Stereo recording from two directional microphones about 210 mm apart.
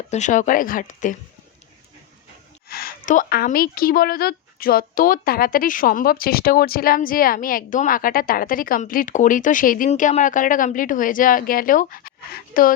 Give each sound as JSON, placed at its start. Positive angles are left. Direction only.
{"t": 0.1, "sound": "a woman's voice", "side_deg": 35}
{"t": 2.6, "sound": "a woman's voice", "side_deg": 45}